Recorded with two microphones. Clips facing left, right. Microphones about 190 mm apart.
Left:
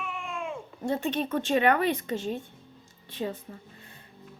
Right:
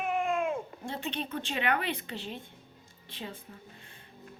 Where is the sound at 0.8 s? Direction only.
45° left (ahead or behind).